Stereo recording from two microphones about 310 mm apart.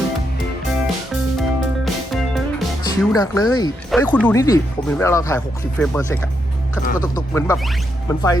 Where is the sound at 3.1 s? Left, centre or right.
Centre.